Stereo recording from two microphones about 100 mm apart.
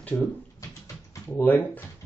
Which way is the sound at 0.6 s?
35° left (ahead or behind).